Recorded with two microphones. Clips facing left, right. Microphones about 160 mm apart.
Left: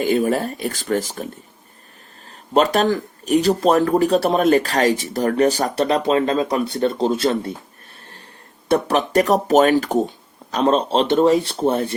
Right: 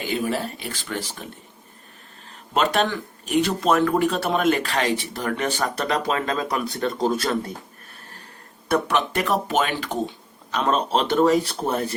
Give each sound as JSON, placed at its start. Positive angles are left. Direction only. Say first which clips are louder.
{"t": 0.0, "sound": "speech", "louder": "left 7 dB", "side_deg": 45}
{"t": 2.5, "sound": "speech", "louder": "left 5 dB", "side_deg": 40}
{"t": 8.7, "sound": "speech", "louder": "left 5 dB", "side_deg": 40}